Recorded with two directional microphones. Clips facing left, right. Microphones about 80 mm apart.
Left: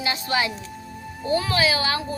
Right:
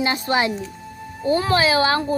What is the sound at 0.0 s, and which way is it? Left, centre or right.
A woman's voice, right.